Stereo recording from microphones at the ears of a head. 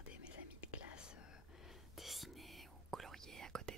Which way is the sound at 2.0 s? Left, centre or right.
Centre.